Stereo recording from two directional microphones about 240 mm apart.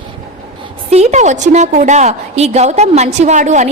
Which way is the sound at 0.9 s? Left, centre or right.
Right.